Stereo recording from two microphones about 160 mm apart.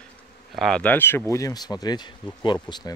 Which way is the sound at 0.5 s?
5° left (ahead or behind).